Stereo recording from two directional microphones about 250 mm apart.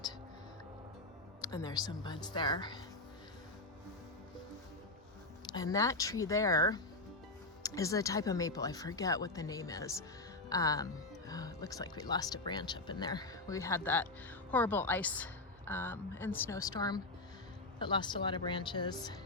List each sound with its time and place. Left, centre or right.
1.4 s speech: centre
5.5 s speech: centre